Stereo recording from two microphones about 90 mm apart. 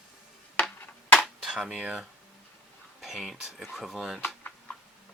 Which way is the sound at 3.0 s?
Centre (ahead or behind).